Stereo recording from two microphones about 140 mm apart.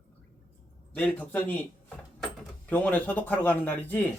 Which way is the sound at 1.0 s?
10° left (ahead or behind).